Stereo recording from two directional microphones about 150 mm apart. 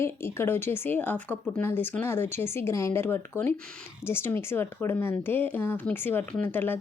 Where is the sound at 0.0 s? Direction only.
15° left (ahead or behind).